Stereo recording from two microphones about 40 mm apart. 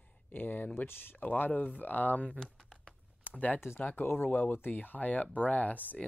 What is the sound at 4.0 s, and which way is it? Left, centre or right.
Speech, left.